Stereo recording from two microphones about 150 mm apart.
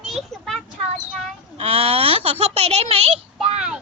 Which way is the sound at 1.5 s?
40° right (ahead or behind).